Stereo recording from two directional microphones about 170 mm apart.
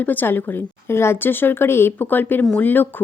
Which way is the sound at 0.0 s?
10° left (ahead or behind).